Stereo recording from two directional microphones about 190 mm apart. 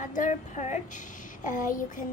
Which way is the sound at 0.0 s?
40° left (ahead or behind).